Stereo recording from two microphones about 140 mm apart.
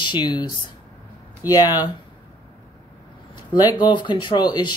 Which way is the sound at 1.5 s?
25° left (ahead or behind).